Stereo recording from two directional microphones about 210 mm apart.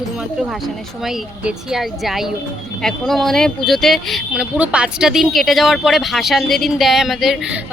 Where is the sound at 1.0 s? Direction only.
Centre (ahead or behind).